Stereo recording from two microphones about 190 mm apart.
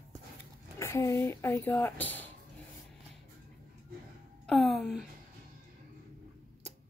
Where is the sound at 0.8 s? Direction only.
15° left (ahead or behind).